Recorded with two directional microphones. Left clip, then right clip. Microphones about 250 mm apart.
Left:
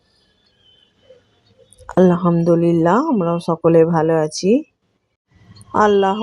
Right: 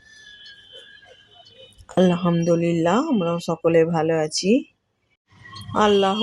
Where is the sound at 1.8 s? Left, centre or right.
Centre.